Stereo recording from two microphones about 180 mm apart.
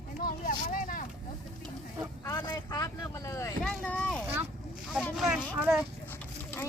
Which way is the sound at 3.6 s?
5° left (ahead or behind).